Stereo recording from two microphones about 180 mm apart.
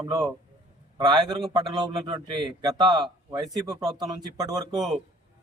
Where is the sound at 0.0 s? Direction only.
20° right (ahead or behind).